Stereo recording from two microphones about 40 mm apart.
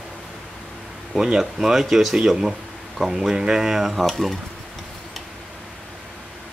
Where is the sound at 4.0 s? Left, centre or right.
Centre.